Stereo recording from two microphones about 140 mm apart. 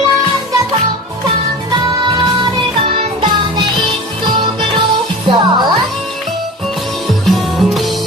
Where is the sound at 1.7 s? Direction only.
30° right (ahead or behind).